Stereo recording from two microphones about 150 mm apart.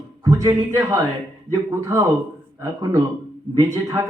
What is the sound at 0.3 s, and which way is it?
A man's voice, 20° right (ahead or behind).